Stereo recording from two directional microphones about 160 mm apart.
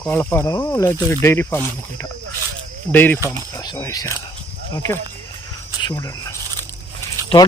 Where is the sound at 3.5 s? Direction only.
20° left (ahead or behind).